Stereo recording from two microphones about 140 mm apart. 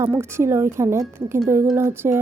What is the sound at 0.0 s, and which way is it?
A woman's voice, 20° right (ahead or behind).